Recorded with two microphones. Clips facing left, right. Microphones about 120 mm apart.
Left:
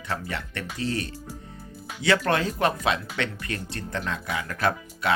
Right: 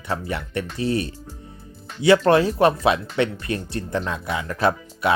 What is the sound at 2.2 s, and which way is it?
Speech, 25° right (ahead or behind).